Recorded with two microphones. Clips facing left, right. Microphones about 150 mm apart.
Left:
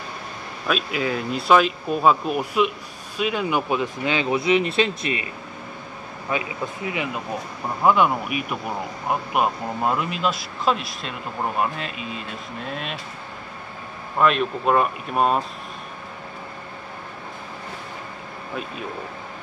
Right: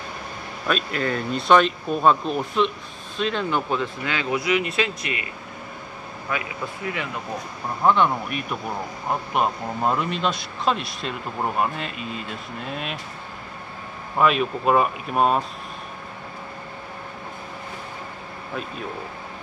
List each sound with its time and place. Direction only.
0.7 s a man's voice: 5° left (ahead or behind); by 5.2 s 30° left (ahead or behind)
6.3 s speech: 20° left (ahead or behind)
7.8 s a man's voice: 10° left (ahead or behind)
14.1 s a man's voice: 5° right (ahead or behind)